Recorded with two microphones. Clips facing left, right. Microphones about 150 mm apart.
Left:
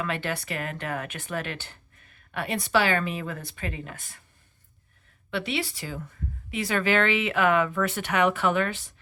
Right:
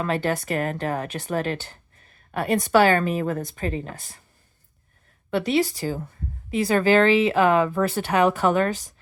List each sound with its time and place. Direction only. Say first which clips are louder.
0.0 s speech: right 6 dB; 40° right (ahead or behind)
5.3 s speech: right 8 dB; 40° right (ahead or behind)